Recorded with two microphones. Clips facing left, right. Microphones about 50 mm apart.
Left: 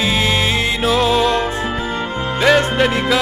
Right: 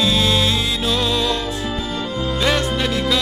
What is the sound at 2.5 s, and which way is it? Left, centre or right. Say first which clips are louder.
Music: left 5 dB; left.